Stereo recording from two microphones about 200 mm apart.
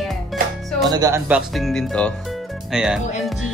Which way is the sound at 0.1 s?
Centre (ahead or behind).